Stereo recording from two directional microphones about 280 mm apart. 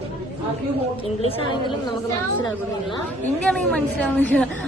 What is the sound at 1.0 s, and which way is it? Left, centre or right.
Speech, centre.